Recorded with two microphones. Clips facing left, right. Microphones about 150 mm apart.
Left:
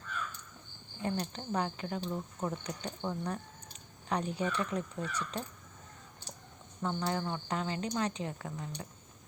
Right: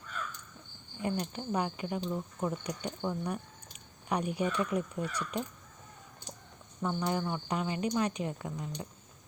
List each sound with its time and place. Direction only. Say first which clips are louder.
1.0 s speech: right 2 dB; 15° right (ahead or behind)
2.0 s speech: right 2 dB; centre (ahead or behind)
6.8 s speech: right 2 dB; 15° right (ahead or behind)